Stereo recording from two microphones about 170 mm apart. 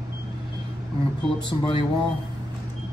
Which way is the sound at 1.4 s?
30° left (ahead or behind).